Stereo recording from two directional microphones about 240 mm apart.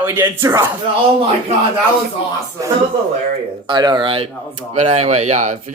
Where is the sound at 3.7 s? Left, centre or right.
Centre.